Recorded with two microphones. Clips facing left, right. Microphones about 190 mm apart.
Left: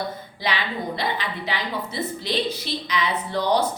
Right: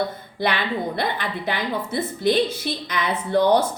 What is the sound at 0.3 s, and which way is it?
A woman's voice, 55° right (ahead or behind).